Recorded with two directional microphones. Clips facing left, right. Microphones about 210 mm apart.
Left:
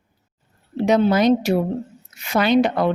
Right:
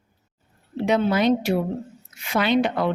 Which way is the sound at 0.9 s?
40° left (ahead or behind).